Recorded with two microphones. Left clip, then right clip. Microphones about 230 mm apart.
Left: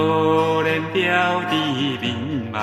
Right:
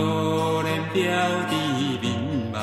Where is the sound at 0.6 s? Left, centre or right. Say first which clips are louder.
Left 4 dB; right.